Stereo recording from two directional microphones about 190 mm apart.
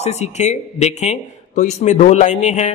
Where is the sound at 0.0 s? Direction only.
35° left (ahead or behind).